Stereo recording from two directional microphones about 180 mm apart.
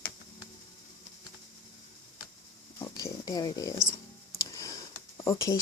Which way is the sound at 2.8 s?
20° left (ahead or behind).